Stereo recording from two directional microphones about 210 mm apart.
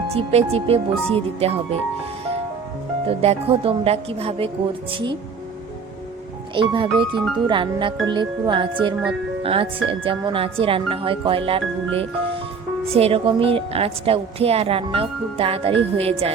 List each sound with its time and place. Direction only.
0.1 s a woman's voice: 30° right (ahead or behind)
3.1 s a woman's voice: 30° right (ahead or behind)
6.5 s a woman's voice: 25° right (ahead or behind)